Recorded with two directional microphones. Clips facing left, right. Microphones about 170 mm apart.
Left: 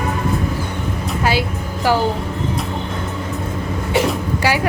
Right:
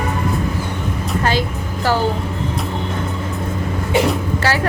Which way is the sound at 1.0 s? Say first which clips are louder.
Even; 10° left (ahead or behind).